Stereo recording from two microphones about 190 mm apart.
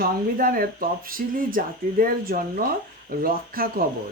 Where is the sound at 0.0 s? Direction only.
50° right (ahead or behind).